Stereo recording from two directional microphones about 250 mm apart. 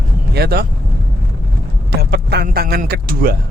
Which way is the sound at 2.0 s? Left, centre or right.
Right.